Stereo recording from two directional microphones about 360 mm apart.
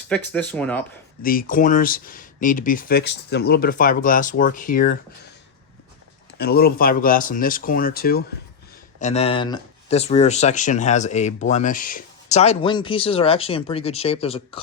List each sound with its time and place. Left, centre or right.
0.1 s speech: centre
1.2 s speech: left
6.4 s speech: left